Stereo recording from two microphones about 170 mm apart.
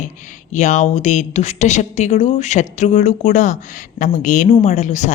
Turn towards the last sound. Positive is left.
turn(degrees=45)  # may be behind; listen again after turning